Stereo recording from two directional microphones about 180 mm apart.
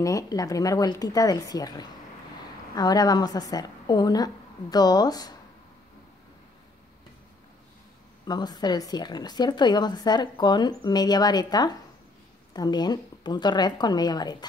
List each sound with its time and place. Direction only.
0.0 s speech: 20° left (ahead or behind)
8.3 s speech: 25° left (ahead or behind)